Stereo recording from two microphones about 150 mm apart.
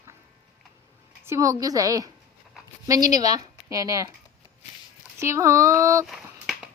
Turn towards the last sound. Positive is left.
turn(degrees=0)  # may be behind; listen again after turning